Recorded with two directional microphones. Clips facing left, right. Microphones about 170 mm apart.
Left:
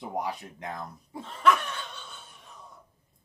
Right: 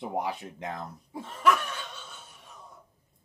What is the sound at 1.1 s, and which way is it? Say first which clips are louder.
Laughter: left 1 dB; 10° right (ahead or behind).